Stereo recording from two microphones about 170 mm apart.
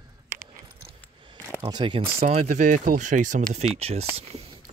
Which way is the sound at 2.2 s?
40° right (ahead or behind).